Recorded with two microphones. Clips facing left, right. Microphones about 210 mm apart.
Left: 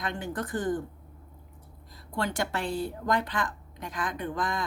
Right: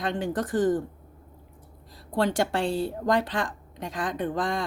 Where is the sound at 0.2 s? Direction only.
90° right.